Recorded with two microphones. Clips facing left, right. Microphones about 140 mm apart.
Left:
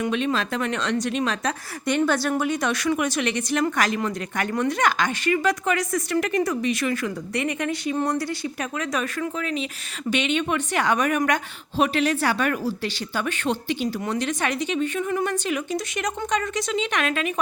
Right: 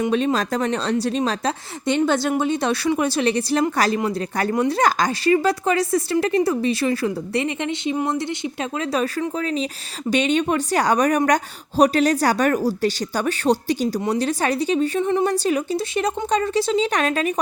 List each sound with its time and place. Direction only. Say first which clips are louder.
0.1 s speech: right 4 dB; 35° right (ahead or behind)